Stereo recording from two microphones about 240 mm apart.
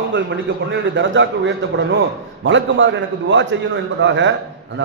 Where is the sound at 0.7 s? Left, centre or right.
Right.